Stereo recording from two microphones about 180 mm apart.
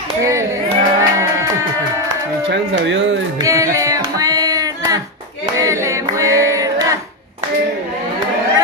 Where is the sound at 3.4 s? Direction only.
20° right (ahead or behind).